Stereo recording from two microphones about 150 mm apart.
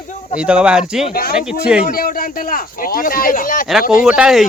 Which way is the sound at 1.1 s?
80° left.